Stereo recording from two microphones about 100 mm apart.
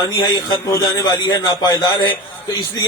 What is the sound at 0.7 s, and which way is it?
A man's voice, 35° left (ahead or behind).